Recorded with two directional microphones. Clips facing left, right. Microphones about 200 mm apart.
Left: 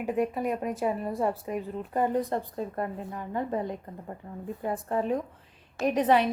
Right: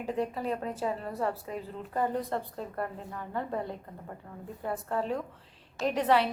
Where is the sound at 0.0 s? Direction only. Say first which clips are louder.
Left 4 dB; 15° left (ahead or behind).